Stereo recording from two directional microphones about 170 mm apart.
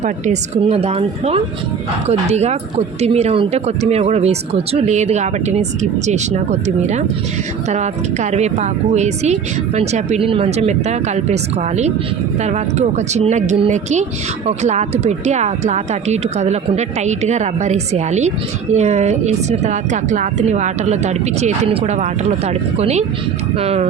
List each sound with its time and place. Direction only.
0.0 s speech: 40° right (ahead or behind)
12.4 s speech: 40° right (ahead or behind)